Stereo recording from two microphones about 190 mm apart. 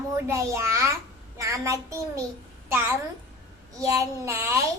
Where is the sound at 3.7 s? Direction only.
15° right (ahead or behind).